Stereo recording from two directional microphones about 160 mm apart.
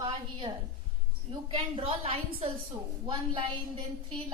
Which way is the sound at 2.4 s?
50° right (ahead or behind).